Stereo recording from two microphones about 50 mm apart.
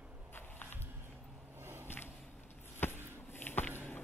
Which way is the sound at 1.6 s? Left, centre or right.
Right.